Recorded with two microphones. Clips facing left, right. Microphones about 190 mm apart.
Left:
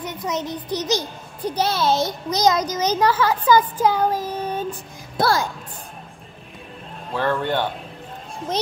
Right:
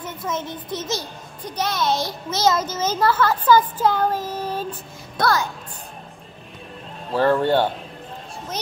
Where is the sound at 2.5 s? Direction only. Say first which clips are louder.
Left 1 dB; 15° left (ahead or behind).